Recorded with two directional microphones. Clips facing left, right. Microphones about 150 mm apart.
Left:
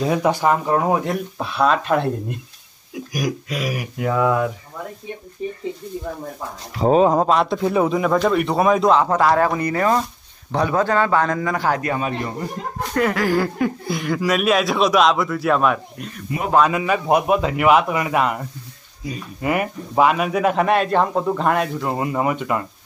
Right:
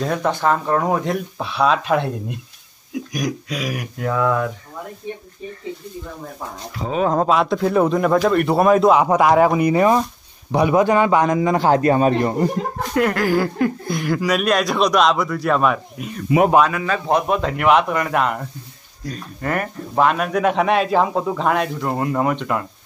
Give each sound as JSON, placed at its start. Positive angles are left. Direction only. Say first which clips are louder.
{"t": 0.0, "sound": "speech", "louder": "left 2 dB", "side_deg": 5}
{"t": 6.8, "sound": "speech", "louder": "left 7 dB", "side_deg": 35}
{"t": 7.2, "sound": "speech", "louder": "right 1 dB", "side_deg": 0}
{"t": 8.9, "sound": "a man's voice", "louder": "right 2 dB", "side_deg": -15}
{"t": 12.9, "sound": "speech", "louder": "right 1 dB", "side_deg": 0}
{"t": 16.6, "sound": "speech", "louder": "left 2 dB", "side_deg": 15}